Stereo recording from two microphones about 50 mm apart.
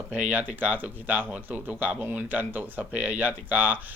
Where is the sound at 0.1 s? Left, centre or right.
Right.